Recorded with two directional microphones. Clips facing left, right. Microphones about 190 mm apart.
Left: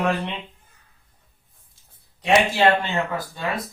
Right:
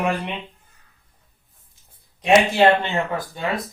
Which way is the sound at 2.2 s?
20° right (ahead or behind).